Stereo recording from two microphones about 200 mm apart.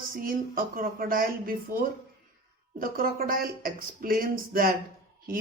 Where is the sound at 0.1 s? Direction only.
45° right (ahead or behind).